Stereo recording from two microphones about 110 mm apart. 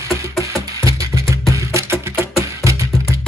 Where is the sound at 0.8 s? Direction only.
30° right (ahead or behind).